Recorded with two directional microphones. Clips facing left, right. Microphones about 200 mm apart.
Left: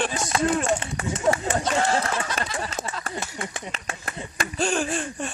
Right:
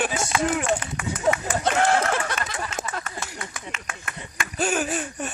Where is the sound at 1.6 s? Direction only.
60° right (ahead or behind).